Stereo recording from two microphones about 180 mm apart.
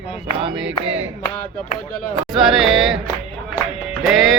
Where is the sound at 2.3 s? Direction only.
Centre (ahead or behind).